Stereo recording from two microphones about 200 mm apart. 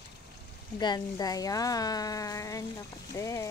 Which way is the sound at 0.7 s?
20° left (ahead or behind).